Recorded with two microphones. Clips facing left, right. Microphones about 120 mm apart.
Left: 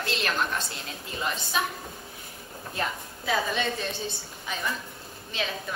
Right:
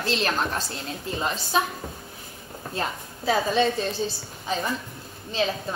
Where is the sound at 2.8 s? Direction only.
30° right (ahead or behind).